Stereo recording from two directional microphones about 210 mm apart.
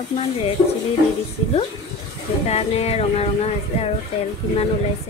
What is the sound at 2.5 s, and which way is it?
A woman's voice, 30° left (ahead or behind).